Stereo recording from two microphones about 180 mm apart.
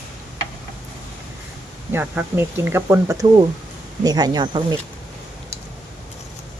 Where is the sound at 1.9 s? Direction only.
10° right (ahead or behind).